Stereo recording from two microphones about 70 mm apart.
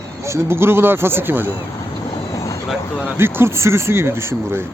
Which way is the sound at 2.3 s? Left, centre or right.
Left.